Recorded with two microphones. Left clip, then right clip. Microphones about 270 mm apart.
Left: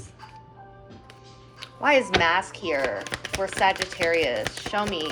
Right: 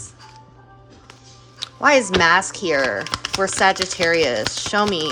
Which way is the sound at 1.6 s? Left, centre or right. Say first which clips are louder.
Right 5 dB; centre.